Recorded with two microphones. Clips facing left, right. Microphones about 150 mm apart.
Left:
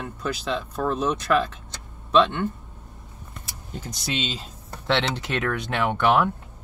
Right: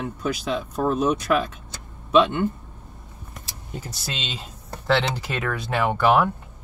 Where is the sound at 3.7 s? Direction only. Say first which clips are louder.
Left 3 dB; 5° right (ahead or behind).